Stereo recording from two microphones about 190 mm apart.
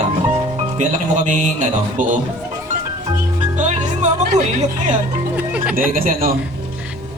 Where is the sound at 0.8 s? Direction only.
40° right (ahead or behind).